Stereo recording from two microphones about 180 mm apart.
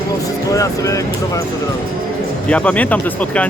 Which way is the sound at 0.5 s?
20° left (ahead or behind).